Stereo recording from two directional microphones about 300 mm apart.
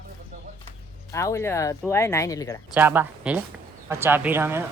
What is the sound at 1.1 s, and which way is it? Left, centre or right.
Speech, centre.